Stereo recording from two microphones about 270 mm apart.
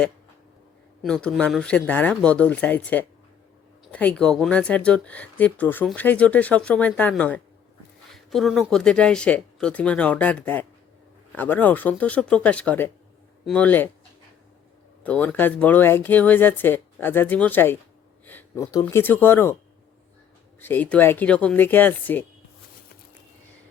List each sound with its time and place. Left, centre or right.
1.0 s speech: centre
15.0 s speech: centre
20.6 s speech: centre